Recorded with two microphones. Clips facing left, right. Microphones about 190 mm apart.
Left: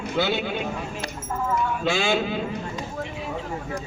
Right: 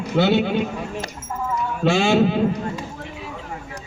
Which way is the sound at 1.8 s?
60° right (ahead or behind).